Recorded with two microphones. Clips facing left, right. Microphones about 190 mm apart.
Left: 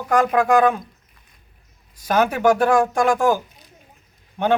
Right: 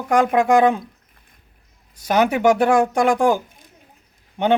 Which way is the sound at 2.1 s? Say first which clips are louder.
Right 1 dB; 15° right (ahead or behind).